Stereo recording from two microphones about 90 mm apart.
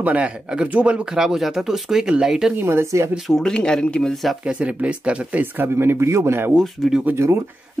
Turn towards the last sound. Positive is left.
turn(degrees=-30)  # may be behind; listen again after turning